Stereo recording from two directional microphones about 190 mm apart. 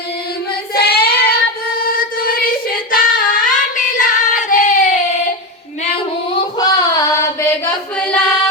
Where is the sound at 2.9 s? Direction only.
45° left (ahead or behind).